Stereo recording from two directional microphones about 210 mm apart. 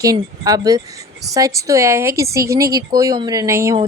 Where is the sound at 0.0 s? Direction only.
15° right (ahead or behind).